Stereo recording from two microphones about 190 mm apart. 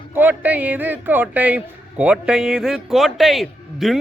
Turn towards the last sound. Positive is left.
turn(degrees=0)  # may be behind; listen again after turning